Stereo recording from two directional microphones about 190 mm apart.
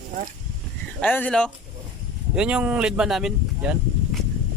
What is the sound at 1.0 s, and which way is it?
Speech, 10° left (ahead or behind).